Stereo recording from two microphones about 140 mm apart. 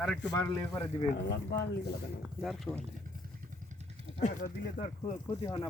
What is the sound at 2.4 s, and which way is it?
Speech, centre (ahead or behind).